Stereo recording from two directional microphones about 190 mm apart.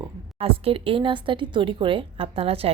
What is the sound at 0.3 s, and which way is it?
Speech, 30° right (ahead or behind).